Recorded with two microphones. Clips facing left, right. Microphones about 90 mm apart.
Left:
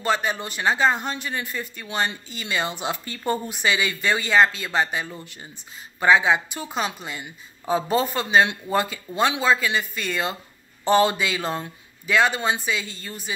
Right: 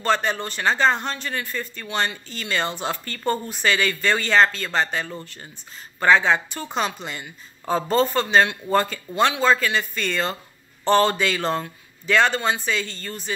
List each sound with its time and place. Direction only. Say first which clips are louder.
0.0 s speech: right 2 dB; 10° left (ahead or behind)